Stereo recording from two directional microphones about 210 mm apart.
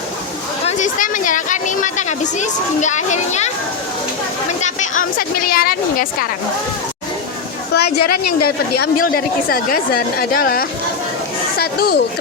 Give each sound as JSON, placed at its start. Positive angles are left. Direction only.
{"t": 0.8, "sound": "a woman's voice", "side_deg": 40}
{"t": 4.6, "sound": "a woman's voice", "side_deg": 35}
{"t": 7.7, "sound": "a woman's voice", "side_deg": 50}